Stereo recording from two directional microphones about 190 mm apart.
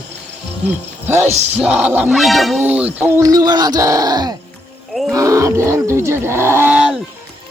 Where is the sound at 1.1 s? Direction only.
15° right (ahead or behind).